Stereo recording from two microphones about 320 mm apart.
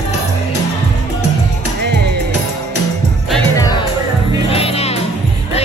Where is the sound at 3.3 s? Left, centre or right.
Centre.